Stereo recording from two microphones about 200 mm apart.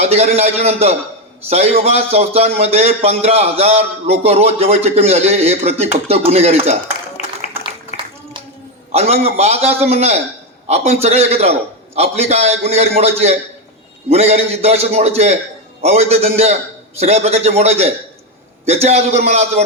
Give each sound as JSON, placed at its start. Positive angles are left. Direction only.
{"t": 0.0, "sound": "a man's voice", "side_deg": -30}
{"t": 7.2, "sound": "a sound", "side_deg": 35}
{"t": 8.9, "sound": "a man's voice", "side_deg": -30}